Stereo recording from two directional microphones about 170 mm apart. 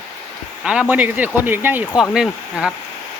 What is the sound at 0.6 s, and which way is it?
Speech, 5° right (ahead or behind).